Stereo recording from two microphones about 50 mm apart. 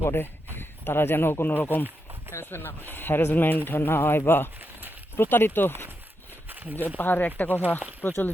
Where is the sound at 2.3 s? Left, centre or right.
Left.